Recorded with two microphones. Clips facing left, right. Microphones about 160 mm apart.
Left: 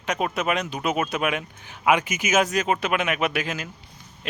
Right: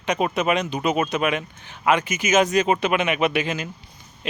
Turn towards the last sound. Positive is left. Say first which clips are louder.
# right 4 dB
turn(degrees=5)  # may be behind; listen again after turning